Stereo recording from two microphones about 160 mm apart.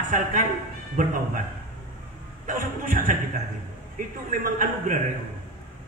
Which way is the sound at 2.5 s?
55° right (ahead or behind).